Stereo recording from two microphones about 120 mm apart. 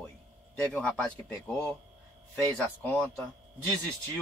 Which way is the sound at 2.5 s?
15° left (ahead or behind).